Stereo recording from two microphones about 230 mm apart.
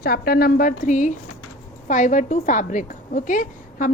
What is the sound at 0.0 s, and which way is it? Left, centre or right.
A woman's voice, left.